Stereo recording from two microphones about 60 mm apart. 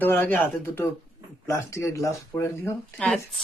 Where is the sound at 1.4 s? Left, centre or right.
Left.